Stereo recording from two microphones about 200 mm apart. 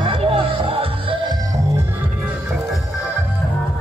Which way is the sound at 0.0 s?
25° right (ahead or behind).